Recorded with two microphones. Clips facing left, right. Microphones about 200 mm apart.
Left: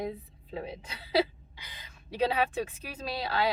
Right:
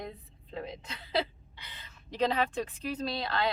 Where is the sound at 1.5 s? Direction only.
10° left (ahead or behind).